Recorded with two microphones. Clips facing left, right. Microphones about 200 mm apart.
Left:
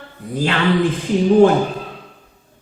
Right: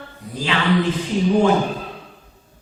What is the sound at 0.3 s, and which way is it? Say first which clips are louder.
Mantra: left 4 dB; 55° left (ahead or behind).